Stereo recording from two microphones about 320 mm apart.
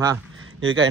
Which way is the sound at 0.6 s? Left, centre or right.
Right.